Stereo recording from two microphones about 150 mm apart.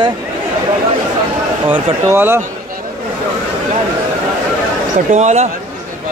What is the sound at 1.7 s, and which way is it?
Speech, 15° right (ahead or behind).